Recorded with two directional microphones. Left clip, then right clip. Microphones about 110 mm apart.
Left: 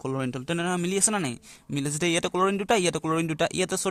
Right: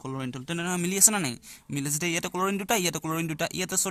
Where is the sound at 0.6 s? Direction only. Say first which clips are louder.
Right 2 dB; 25° left (ahead or behind).